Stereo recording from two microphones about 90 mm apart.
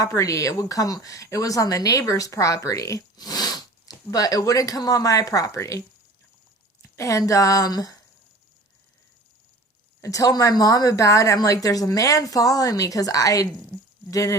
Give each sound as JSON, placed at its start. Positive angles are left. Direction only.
{"t": 0.0, "sound": "speech", "side_deg": 40}
{"t": 6.8, "sound": "speech", "side_deg": 35}
{"t": 10.0, "sound": "speech", "side_deg": 40}